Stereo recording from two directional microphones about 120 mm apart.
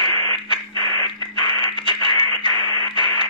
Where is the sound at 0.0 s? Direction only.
40° left (ahead or behind).